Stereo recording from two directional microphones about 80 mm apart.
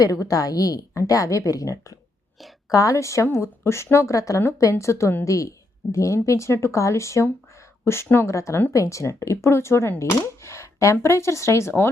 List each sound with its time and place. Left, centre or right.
0.0 s a woman's voice: left